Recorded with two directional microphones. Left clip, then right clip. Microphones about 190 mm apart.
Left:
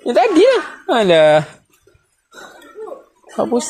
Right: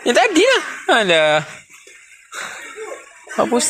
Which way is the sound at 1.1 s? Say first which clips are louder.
Left 4 dB; 20° left (ahead or behind).